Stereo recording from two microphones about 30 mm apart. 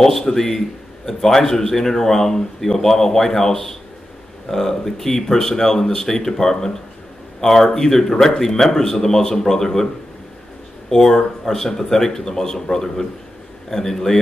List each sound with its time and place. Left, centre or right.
0.0 s a man's voice: centre
10.9 s a man's voice: centre